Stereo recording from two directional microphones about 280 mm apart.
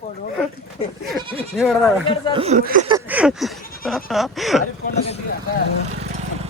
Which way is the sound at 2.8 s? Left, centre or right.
Centre.